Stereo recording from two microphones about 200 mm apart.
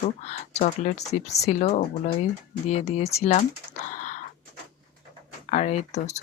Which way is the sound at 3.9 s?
35° left (ahead or behind).